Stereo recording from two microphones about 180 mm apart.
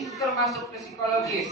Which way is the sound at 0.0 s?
Centre (ahead or behind).